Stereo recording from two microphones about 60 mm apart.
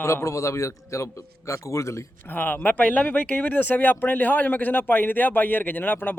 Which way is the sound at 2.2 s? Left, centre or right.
Left.